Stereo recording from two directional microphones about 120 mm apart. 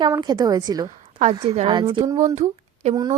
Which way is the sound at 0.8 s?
80° right.